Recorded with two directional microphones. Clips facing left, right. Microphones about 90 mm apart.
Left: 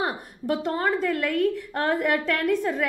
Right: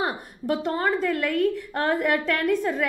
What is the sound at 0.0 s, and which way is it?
A woman's voice, 20° right (ahead or behind).